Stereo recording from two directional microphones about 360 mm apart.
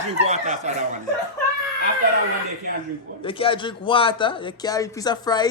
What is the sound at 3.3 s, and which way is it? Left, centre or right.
A man's voice, centre.